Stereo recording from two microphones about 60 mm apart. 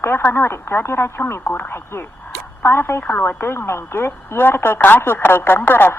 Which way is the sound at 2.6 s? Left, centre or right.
Left.